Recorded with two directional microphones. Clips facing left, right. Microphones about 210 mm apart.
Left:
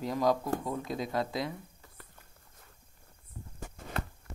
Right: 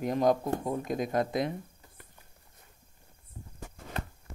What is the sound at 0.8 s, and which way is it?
Speech, 50° right (ahead or behind).